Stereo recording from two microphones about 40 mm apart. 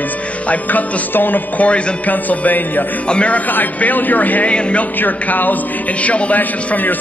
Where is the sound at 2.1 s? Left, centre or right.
Left.